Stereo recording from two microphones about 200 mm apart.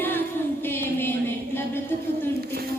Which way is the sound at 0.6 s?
10° left (ahead or behind).